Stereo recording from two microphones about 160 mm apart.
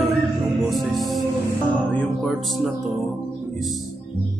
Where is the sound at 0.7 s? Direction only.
Centre (ahead or behind).